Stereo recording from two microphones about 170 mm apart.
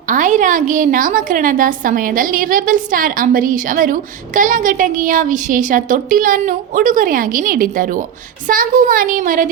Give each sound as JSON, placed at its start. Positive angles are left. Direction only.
{"t": 0.1, "sound": "a woman's voice", "side_deg": -50}